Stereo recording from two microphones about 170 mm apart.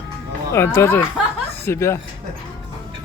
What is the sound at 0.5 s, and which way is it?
Speech, 15° left (ahead or behind).